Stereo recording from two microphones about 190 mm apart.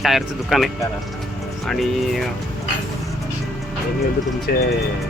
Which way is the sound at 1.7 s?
Centre (ahead or behind).